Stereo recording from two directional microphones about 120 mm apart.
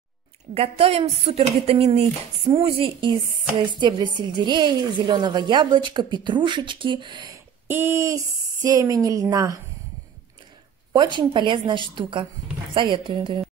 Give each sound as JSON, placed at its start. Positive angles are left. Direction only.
{"t": 0.6, "sound": "a woman's voice", "side_deg": -55}
{"t": 7.6, "sound": "speech", "side_deg": -20}
{"t": 10.9, "sound": "a woman's voice", "side_deg": -40}